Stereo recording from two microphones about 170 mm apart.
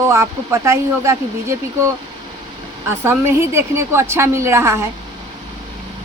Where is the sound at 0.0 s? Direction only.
15° right (ahead or behind).